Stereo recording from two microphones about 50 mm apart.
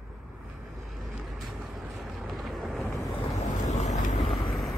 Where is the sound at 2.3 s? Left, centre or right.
Centre.